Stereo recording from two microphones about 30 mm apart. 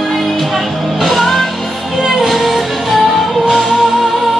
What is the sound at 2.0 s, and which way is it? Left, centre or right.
Music, centre.